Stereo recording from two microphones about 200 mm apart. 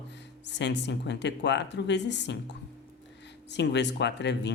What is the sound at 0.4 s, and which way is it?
Speech, 60° left (ahead or behind).